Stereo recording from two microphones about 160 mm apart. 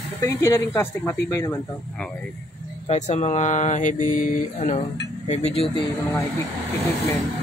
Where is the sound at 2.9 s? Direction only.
45° left (ahead or behind).